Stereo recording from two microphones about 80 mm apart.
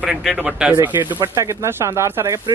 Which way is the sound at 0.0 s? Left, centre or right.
Centre.